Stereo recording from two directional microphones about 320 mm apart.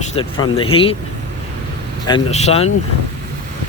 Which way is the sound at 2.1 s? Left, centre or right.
Centre.